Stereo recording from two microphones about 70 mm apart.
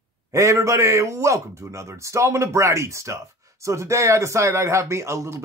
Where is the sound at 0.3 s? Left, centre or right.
Right.